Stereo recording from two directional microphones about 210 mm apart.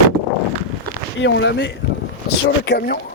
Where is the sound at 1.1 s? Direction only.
60° left (ahead or behind).